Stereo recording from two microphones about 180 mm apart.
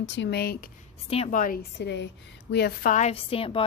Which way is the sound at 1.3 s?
50° left (ahead or behind).